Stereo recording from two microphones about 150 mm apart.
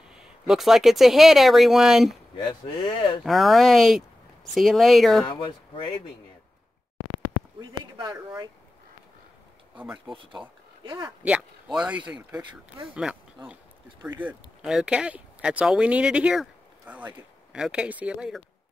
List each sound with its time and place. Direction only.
0.1 s speech: 5° right (ahead or behind)
2.3 s speech: 35° left (ahead or behind)
3.3 s speech: centre (ahead or behind)
5.2 s speech: 35° left (ahead or behind)
7.8 s speech: 25° right (ahead or behind)
9.8 s speech: 5° right (ahead or behind)
11.2 s speech: 5° right (ahead or behind)
12.4 s speech: 35° right (ahead or behind)
12.9 s speech: 5° right (ahead or behind)